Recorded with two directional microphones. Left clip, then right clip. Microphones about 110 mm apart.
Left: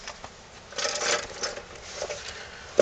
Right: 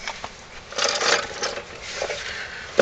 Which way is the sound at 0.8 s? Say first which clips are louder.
Right 6 dB; 25° right (ahead or behind).